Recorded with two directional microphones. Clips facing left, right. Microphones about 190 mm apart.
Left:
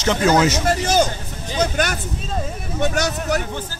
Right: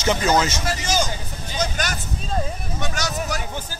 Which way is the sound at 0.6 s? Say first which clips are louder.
Left 6 dB; 55° left (ahead or behind).